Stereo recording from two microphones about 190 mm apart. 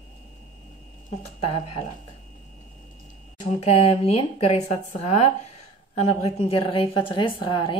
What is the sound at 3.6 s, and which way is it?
A woman's voice, 30° left (ahead or behind).